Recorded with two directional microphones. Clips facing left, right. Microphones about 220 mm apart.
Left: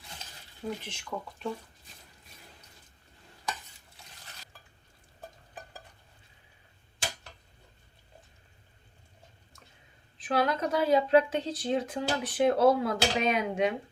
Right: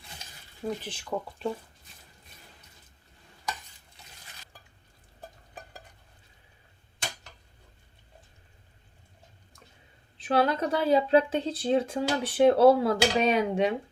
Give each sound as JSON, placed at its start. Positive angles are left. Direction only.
{"t": 0.9, "sound": "speech", "side_deg": -35}
{"t": 10.2, "sound": "speech", "side_deg": -30}